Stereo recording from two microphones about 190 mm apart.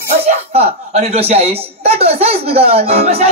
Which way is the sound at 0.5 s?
30° right (ahead or behind).